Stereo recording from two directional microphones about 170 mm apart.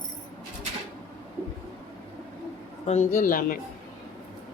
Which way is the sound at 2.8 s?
40° left (ahead or behind).